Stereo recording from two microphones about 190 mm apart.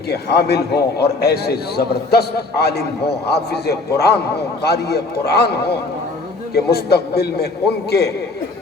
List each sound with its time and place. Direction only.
0.1 s a man's voice: 60° left (ahead or behind)